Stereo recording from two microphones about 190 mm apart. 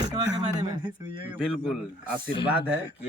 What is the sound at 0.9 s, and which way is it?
A man's voice, 5° right (ahead or behind).